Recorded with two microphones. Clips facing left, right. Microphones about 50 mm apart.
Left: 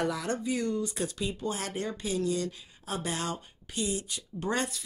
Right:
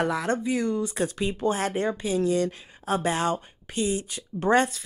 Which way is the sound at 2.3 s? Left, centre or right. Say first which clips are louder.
Right 7 dB; right.